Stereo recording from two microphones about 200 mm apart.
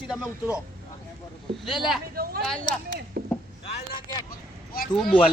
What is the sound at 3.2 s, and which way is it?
Chop, 50° right (ahead or behind).